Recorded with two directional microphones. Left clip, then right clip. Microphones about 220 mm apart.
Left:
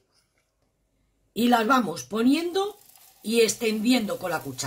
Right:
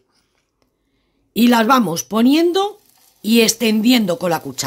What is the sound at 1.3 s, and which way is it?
Speech, 50° right (ahead or behind).